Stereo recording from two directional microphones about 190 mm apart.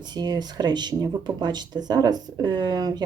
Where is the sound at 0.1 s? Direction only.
20° right (ahead or behind).